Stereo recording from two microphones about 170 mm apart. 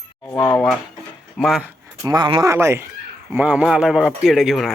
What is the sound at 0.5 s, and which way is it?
Speech, centre (ahead or behind).